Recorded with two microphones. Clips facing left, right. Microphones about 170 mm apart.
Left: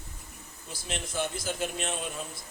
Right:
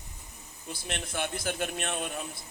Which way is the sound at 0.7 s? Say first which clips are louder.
Left 2 dB; 60° right (ahead or behind).